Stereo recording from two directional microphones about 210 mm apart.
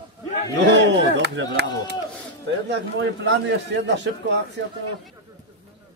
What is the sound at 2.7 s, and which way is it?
A man's voice, 60° right (ahead or behind).